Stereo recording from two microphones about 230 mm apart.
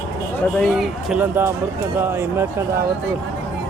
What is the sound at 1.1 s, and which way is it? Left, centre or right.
Speech, centre.